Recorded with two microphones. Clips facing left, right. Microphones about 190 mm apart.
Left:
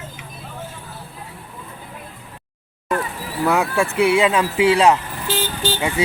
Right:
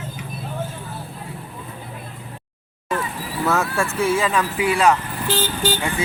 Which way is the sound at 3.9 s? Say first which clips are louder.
Left 5 dB; 70° left (ahead or behind).